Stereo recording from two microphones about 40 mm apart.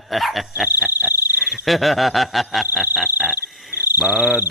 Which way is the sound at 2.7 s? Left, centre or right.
Centre.